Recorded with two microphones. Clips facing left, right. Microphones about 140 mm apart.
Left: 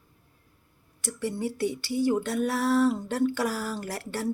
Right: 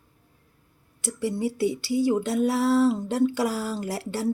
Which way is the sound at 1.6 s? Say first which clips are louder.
Right 2 dB; 20° right (ahead or behind).